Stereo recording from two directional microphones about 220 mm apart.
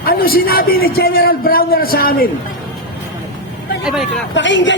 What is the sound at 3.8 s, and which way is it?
Speech, centre (ahead or behind).